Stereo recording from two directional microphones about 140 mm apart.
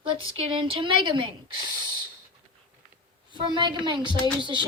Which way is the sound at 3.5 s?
35° right (ahead or behind).